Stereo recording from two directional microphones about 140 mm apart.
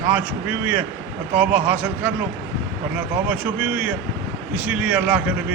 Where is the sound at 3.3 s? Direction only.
10° right (ahead or behind).